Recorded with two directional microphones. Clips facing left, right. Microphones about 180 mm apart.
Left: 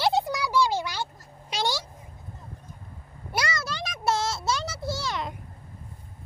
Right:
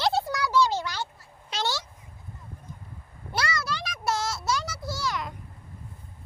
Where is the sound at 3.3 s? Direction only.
20° left (ahead or behind).